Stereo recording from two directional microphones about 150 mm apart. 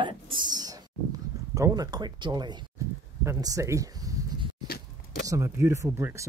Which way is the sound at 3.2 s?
20° right (ahead or behind).